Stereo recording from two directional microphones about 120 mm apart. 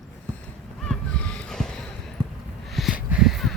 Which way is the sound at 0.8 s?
10° left (ahead or behind).